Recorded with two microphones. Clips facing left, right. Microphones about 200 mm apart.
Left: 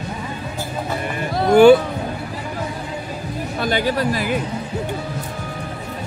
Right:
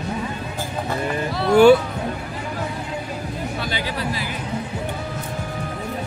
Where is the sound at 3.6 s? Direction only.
50° left (ahead or behind).